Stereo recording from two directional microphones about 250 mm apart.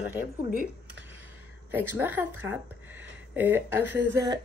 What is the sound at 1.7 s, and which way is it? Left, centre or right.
Speech, centre.